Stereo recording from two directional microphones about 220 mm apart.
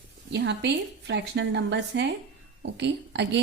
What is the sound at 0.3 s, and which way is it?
A woman's voice, 50° right (ahead or behind).